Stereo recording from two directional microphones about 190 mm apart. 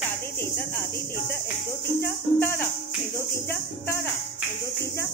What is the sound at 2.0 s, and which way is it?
Speech, 10° left (ahead or behind).